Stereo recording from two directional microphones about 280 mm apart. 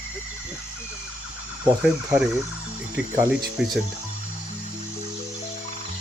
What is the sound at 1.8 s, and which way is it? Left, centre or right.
Speech, centre.